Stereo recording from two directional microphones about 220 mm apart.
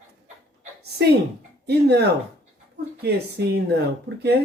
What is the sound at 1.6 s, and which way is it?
Speech, 50° right (ahead or behind).